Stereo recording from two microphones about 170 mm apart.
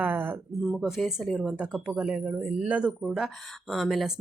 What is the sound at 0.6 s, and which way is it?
Speech, centre (ahead or behind).